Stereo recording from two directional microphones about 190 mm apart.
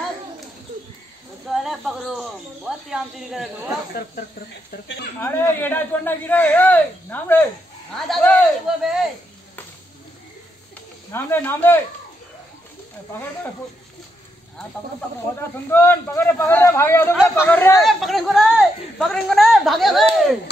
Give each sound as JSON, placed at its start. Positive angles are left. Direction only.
{"t": 1.5, "sound": "speech", "side_deg": 0}
{"t": 5.2, "sound": "speech", "side_deg": 10}
{"t": 11.1, "sound": "speech", "side_deg": 10}
{"t": 15.7, "sound": "speech", "side_deg": 10}
{"t": 17.8, "sound": "speech", "side_deg": 0}